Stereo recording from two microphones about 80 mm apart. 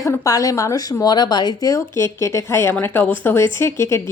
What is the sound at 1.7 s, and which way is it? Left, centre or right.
Speech, left.